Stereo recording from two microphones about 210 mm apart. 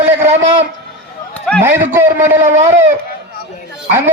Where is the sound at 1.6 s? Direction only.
10° right (ahead or behind).